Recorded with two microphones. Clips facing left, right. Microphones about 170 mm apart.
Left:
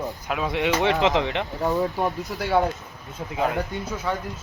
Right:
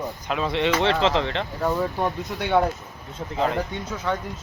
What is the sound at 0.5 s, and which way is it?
Speech, 15° left (ahead or behind).